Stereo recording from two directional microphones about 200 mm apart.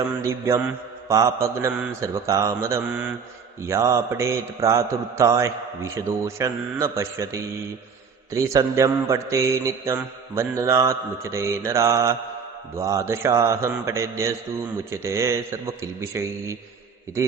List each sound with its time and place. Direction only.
0.2 s mantra: 15° right (ahead or behind)